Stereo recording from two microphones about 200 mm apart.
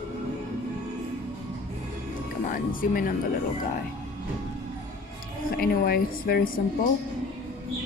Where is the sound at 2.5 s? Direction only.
45° left (ahead or behind).